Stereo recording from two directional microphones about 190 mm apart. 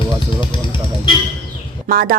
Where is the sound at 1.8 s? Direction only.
50° right (ahead or behind).